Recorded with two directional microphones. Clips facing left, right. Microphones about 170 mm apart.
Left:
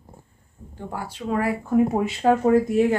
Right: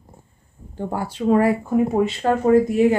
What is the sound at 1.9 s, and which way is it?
Speech, 10° left (ahead or behind).